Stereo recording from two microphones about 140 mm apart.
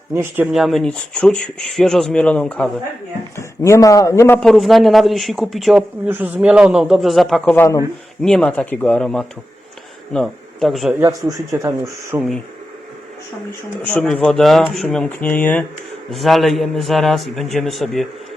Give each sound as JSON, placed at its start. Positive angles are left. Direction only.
{"t": 0.1, "sound": "speech", "side_deg": -15}
{"t": 0.5, "sound": "speech", "side_deg": 0}
{"t": 3.3, "sound": "speech", "side_deg": 20}
{"t": 4.4, "sound": "speech", "side_deg": 0}
{"t": 6.1, "sound": "speech", "side_deg": -15}
{"t": 7.5, "sound": "speech", "side_deg": 15}
{"t": 8.2, "sound": "speech", "side_deg": 5}
{"t": 11.0, "sound": "a man's voice", "side_deg": -25}
{"t": 13.8, "sound": "speech", "side_deg": 5}
{"t": 16.1, "sound": "speech", "side_deg": 0}